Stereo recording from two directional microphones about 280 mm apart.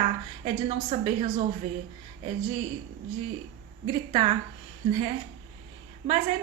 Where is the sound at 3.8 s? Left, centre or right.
Centre.